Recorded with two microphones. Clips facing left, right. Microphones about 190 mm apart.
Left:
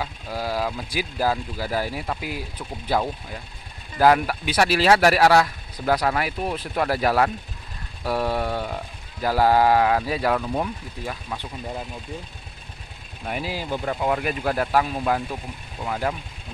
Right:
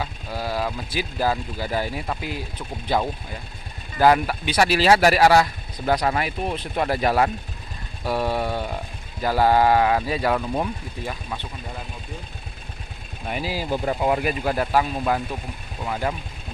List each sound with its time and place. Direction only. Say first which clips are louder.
0.0 s speech: even; 10° left (ahead or behind)
6.7 s speech: even; 20° right (ahead or behind)
8.0 s vehicle: even; centre (ahead or behind)
9.2 s speech: even; centre (ahead or behind)
13.3 s speech: right 2 dB; 5° right (ahead or behind)
14.4 s speech: even; centre (ahead or behind)